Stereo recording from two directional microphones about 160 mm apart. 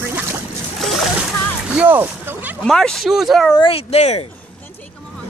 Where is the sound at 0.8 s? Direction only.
Centre (ahead or behind).